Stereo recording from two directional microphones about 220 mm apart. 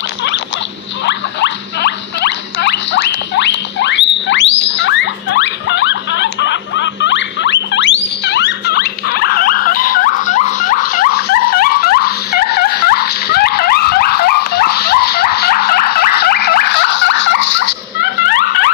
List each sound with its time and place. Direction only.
1.0 s rodents: 50° left (ahead or behind)